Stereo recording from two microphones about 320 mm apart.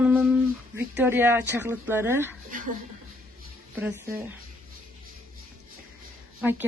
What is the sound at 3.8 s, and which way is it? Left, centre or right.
Speech, centre.